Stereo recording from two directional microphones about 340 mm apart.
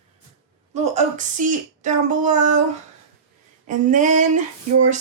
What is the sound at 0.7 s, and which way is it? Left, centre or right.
Speech, centre.